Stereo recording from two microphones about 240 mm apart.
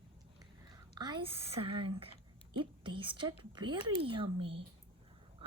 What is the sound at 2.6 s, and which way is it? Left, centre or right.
A woman's voice, centre.